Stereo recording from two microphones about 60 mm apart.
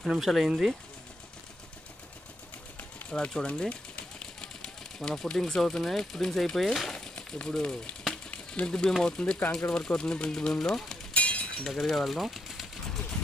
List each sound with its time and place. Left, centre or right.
0.1 s speech: centre
3.1 s speech: centre
8.1 s a sound: centre
9.0 s speech: centre
11.1 s chink: left
11.6 s a sound: centre